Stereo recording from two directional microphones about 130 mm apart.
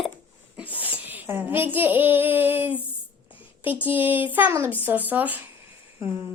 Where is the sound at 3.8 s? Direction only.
15° right (ahead or behind).